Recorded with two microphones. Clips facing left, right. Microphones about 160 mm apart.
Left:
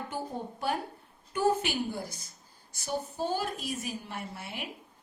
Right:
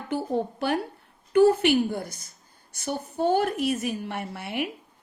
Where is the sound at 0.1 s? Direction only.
75° right (ahead or behind).